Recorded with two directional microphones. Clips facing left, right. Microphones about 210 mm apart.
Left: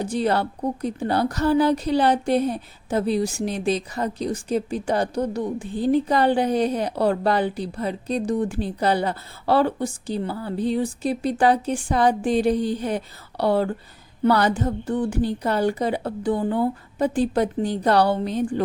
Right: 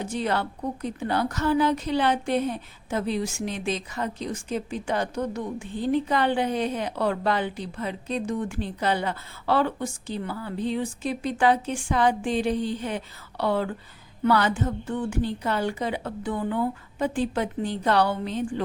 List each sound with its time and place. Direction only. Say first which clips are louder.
0.0 s a woman's voice: left 5 dB; 35° left (ahead or behind)